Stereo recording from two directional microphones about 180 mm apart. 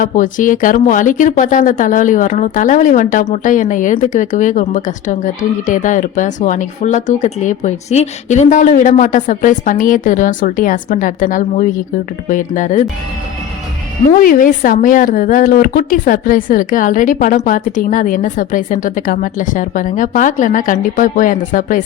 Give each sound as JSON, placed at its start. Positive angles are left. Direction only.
{"t": 0.0, "sound": "speech", "side_deg": 50}
{"t": 14.2, "sound": "speech", "side_deg": 50}